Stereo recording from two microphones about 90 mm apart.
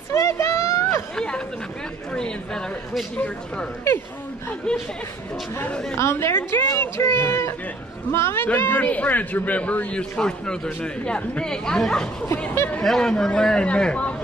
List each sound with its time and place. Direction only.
0.1 s a sound: 30° left (ahead or behind)
1.1 s chatter: 10° left (ahead or behind)
2.1 s a man's voice: 10° left (ahead or behind)
3.9 s a woman's voice: 30° left (ahead or behind)
4.7 s a man's voice: 10° left (ahead or behind)
5.9 s a woman's voice: 30° left (ahead or behind); by 12.3 s 5° left (ahead or behind)
12.5 s a woman's voice: 20° left (ahead or behind)
12.8 s a man's voice: 5° left (ahead or behind)